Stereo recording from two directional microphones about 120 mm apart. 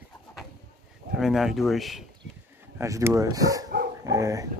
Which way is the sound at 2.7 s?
25° right (ahead or behind).